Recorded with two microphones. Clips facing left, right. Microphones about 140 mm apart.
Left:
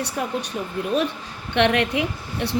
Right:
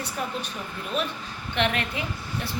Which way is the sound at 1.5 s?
70° left (ahead or behind).